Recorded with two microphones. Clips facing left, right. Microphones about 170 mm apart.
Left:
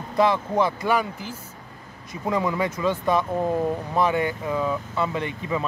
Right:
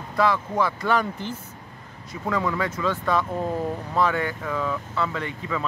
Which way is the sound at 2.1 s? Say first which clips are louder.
Left 1 dB; 15° left (ahead or behind).